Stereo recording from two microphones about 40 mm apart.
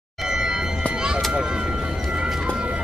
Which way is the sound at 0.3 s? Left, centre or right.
Centre.